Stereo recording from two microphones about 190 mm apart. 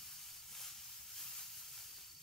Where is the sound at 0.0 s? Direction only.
Centre (ahead or behind).